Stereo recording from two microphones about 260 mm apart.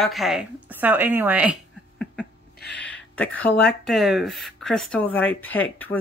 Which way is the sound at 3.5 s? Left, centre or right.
Left.